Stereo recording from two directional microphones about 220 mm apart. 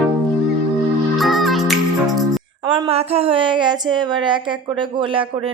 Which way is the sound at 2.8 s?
25° right (ahead or behind).